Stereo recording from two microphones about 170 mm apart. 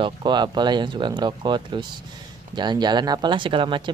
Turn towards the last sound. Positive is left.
turn(degrees=-30)  # may be behind; listen again after turning